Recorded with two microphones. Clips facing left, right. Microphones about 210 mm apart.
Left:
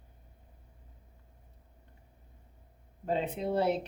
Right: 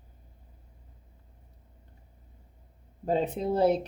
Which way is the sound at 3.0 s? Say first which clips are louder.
Right 4 dB; 40° right (ahead or behind).